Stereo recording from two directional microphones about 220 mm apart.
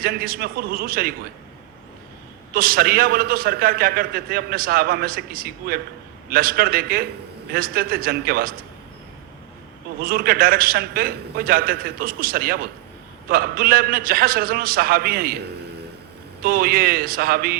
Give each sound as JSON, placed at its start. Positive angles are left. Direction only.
{"t": 0.0, "sound": "a man's voice", "side_deg": -40}
{"t": 2.5, "sound": "a man's voice", "side_deg": -40}
{"t": 10.0, "sound": "a man's voice", "side_deg": -40}
{"t": 16.4, "sound": "a man's voice", "side_deg": -40}